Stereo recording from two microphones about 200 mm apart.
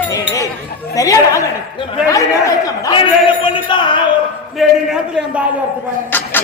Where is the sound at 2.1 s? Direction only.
15° left (ahead or behind).